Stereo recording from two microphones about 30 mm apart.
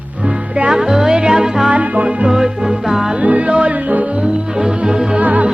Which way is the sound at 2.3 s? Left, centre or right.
Centre.